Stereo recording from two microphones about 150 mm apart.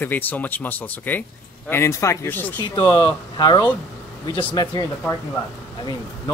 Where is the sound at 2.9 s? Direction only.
30° left (ahead or behind).